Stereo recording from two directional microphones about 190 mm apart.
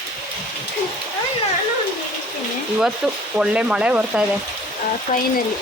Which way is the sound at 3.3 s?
5° right (ahead or behind).